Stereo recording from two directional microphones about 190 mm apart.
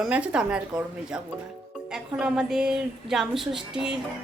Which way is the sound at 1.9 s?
5° right (ahead or behind).